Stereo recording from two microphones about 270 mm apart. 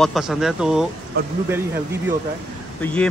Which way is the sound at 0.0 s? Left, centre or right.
Centre.